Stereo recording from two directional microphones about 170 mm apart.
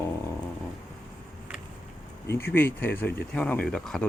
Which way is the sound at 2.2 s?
15° left (ahead or behind).